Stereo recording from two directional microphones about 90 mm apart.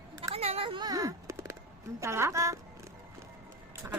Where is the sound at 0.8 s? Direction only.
40° right (ahead or behind).